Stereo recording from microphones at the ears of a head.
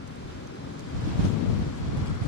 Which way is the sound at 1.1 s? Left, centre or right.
Left.